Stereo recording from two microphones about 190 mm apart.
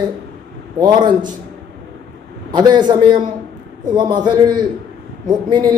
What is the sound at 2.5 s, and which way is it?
A man's voice, 20° right (ahead or behind).